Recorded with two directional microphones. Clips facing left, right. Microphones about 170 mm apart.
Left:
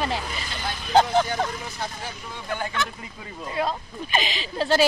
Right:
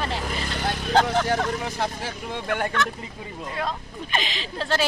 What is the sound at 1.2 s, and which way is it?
Speech, 80° right.